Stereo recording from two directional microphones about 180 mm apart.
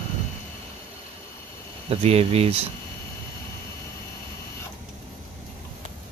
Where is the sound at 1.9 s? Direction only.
35° right (ahead or behind).